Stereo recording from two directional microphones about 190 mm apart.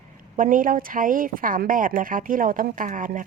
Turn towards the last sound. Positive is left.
turn(degrees=-45)  # may be behind; listen again after turning